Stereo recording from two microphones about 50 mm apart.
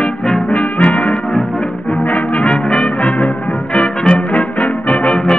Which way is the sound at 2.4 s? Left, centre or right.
Centre.